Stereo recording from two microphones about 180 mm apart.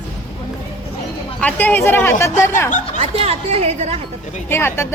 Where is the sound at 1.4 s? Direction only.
10° left (ahead or behind).